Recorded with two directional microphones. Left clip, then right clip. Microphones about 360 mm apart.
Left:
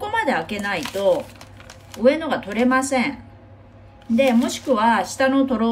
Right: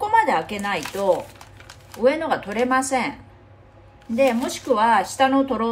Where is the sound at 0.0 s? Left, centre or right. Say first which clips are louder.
Right 3 dB; centre.